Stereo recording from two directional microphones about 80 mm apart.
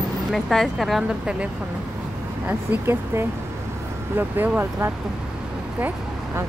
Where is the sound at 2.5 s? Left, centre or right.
Right.